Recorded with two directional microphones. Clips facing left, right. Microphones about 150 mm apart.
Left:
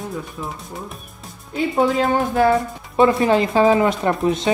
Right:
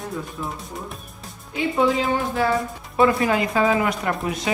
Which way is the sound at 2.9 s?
25° left (ahead or behind).